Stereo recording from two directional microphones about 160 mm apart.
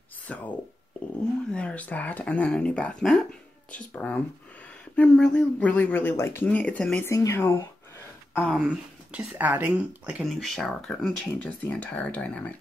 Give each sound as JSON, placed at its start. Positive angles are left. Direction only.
{"t": 0.3, "sound": "speech", "side_deg": 10}
{"t": 1.5, "sound": "speech", "side_deg": 5}
{"t": 7.1, "sound": "speech", "side_deg": 20}
{"t": 8.4, "sound": "speech", "side_deg": 5}
{"t": 8.6, "sound": "speech", "side_deg": -10}